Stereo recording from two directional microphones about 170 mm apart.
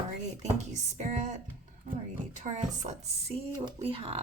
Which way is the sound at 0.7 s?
45° right (ahead or behind).